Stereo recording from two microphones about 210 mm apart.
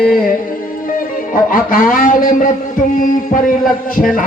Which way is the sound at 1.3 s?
40° left (ahead or behind).